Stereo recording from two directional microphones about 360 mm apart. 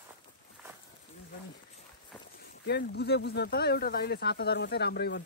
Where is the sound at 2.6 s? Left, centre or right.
Left.